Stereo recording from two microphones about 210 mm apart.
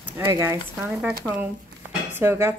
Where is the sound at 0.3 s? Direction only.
15° right (ahead or behind).